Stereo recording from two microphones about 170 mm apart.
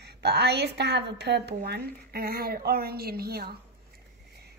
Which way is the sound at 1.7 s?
65° right (ahead or behind).